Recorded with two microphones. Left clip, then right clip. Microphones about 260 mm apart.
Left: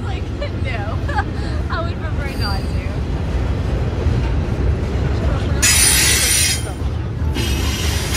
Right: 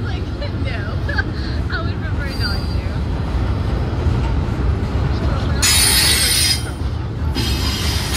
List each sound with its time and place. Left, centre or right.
5.6 s music: right
7.3 s mechanisms: right